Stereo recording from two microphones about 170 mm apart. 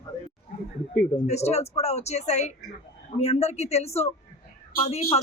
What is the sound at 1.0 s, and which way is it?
Speech, 40° left (ahead or behind).